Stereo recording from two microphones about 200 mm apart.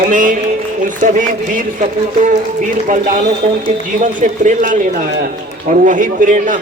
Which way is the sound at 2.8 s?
40° right (ahead or behind).